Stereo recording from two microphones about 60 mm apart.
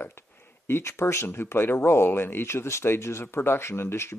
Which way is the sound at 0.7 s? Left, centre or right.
Left.